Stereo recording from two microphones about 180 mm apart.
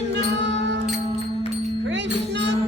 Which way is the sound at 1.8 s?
75° right (ahead or behind).